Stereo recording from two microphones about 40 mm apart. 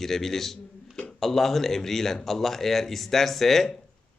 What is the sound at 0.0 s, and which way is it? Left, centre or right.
Speech, centre.